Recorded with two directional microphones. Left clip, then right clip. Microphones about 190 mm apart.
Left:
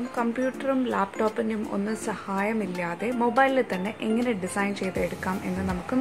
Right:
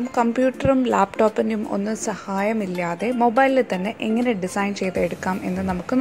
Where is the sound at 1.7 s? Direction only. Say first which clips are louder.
Right 5 dB; 20° right (ahead or behind).